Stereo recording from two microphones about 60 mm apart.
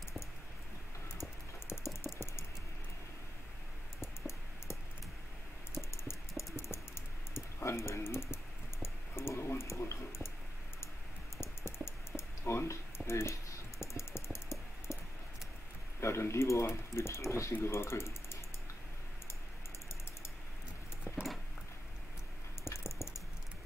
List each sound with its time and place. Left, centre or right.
4.0 s music: left
5.8 s music: left
7.3 s typing: left
8.8 s a sound: left
11.4 s music: left
12.2 s computer keyboard: left
16.0 s typing: left
17.5 s speech: left
21.0 s a sound: centre
22.7 s a sound: left